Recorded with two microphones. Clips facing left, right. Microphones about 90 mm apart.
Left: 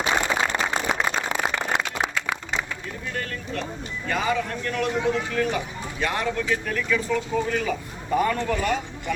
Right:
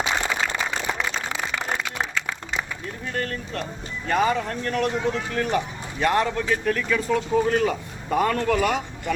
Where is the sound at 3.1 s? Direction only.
40° right (ahead or behind).